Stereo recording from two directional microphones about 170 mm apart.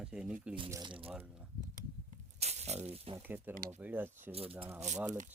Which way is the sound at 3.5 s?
55° right (ahead or behind).